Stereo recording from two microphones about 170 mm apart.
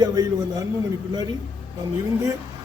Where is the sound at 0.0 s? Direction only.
20° right (ahead or behind).